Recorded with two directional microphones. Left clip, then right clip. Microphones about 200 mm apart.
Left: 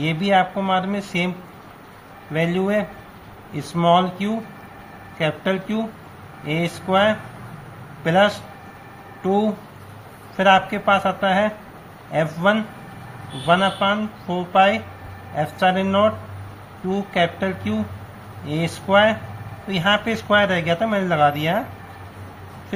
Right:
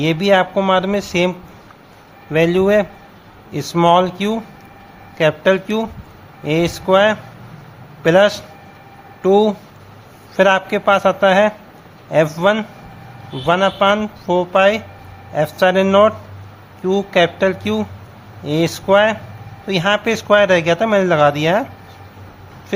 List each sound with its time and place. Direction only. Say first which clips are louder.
0.0 s speech: right 4 dB; 55° right (ahead or behind)
2.3 s speech: right 8 dB; 55° right (ahead or behind)